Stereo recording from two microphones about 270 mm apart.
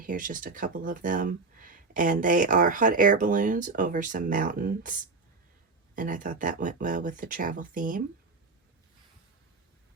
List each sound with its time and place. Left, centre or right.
0.0 s speech: right
6.0 s speech: right